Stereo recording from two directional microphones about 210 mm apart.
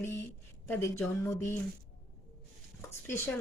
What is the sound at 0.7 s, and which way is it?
Speech, 10° left (ahead or behind).